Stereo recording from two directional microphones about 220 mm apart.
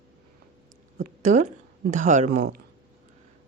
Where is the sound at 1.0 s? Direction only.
35° right (ahead or behind).